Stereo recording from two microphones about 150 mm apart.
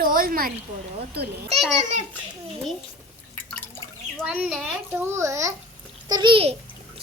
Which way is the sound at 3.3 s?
15° left (ahead or behind).